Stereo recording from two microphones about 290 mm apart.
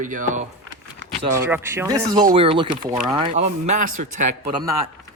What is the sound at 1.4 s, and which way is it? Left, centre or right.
Speech, centre.